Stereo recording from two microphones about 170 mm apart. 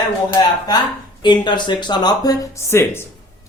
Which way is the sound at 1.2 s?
25° left (ahead or behind).